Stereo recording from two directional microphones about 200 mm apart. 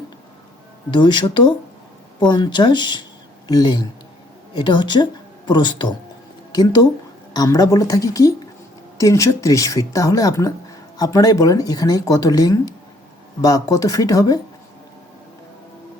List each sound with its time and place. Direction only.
0.9 s speech: 25° left (ahead or behind)